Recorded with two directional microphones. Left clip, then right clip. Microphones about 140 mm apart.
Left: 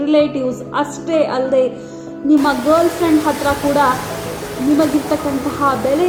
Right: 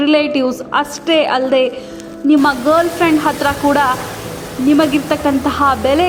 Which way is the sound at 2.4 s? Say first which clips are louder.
Right 1 dB; 50° right (ahead or behind).